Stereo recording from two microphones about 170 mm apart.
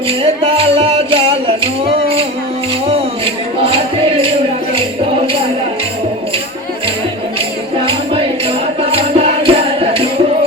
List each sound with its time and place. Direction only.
0.1 s music: 35° right (ahead or behind)
3.6 s music: 35° right (ahead or behind)
7.8 s music: 35° right (ahead or behind)